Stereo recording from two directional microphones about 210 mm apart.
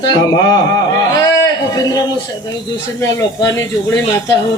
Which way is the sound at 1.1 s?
15° left (ahead or behind).